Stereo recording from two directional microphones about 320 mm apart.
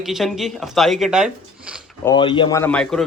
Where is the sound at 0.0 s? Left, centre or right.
Centre.